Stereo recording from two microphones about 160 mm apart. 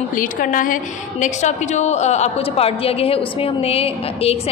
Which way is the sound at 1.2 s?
45° left (ahead or behind).